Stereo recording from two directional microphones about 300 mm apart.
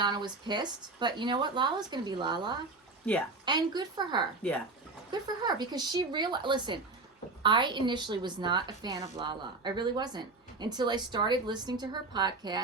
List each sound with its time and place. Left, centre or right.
0.0 s a woman's voice: centre